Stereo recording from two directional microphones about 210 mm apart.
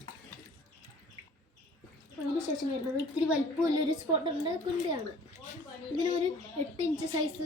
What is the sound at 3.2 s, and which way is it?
A woman's voice, 15° right (ahead or behind).